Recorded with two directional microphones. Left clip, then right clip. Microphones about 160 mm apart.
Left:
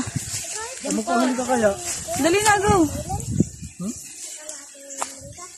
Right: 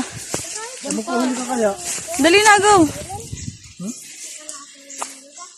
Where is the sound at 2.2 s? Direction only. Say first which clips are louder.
Right 6 dB; 25° right (ahead or behind).